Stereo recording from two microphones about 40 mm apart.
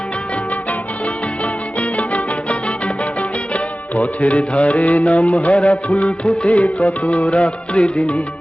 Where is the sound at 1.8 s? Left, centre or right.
Left.